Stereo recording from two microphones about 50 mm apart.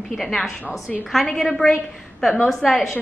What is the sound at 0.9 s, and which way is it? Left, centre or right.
Speech, centre.